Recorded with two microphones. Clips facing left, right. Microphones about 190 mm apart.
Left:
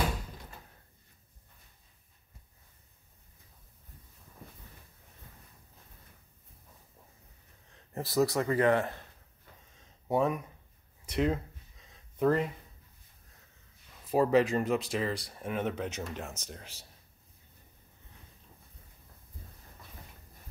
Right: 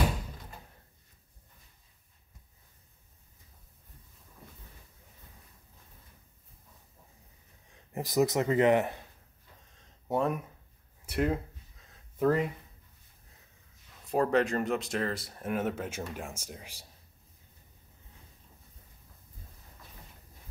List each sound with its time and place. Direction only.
7.9 s speech: 15° right (ahead or behind)
9.8 s a sound: centre (ahead or behind)
11.1 s speech: 5° right (ahead or behind)
14.0 s speech: 5° left (ahead or behind)